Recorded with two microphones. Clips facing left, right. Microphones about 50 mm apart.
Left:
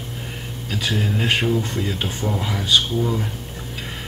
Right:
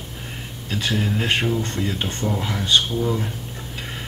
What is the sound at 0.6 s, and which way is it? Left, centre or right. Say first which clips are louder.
Speech: even; centre.